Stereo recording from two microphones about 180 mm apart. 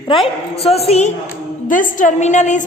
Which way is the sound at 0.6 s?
35° left (ahead or behind).